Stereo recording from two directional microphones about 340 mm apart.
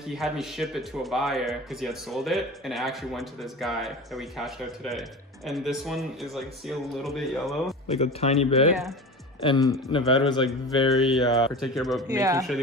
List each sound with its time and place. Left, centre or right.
0.0 s speech: centre
7.9 s speech: centre
10.9 s speech: centre